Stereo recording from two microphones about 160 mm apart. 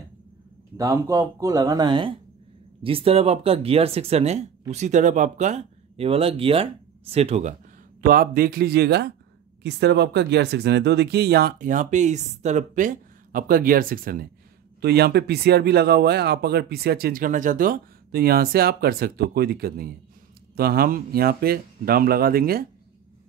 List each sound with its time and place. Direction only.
0.7 s speech: 20° right (ahead or behind); by 7.5 s 40° right (ahead or behind)
8.0 s speech: 65° right (ahead or behind); by 11.5 s 90° right
11.6 s speech: 50° right (ahead or behind)
14.8 s speech: 90° right; by 22.7 s 70° right (ahead or behind)